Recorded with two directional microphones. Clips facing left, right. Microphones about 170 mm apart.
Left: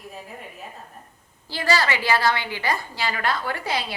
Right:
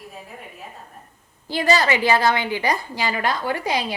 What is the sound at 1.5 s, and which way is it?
A woman's voice, 20° right (ahead or behind).